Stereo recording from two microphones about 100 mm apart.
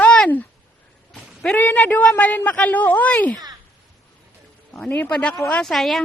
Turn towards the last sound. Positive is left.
turn(degrees=5)  # may be behind; listen again after turning